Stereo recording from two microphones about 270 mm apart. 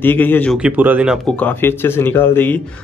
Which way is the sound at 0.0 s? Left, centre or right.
Centre.